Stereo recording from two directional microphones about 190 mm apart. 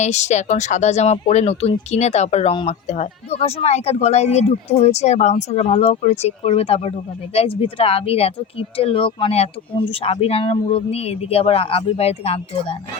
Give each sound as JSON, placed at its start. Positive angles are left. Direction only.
{"t": 0.0, "sound": "speech", "side_deg": 35}